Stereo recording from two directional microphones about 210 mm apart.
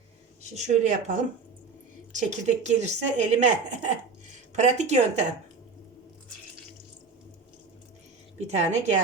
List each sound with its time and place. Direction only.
0.5 s a woman's voice: 35° right (ahead or behind)
8.4 s a woman's voice: 35° right (ahead or behind)